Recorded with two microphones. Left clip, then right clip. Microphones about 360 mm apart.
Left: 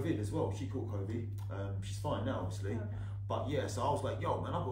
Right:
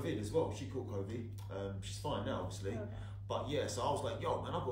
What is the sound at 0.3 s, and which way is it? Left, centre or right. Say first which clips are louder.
A man's voice: right 1 dB; centre.